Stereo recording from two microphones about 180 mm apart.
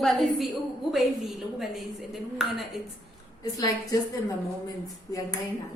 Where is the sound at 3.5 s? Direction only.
20° left (ahead or behind).